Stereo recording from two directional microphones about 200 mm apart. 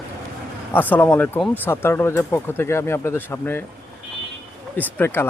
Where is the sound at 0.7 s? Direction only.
10° left (ahead or behind).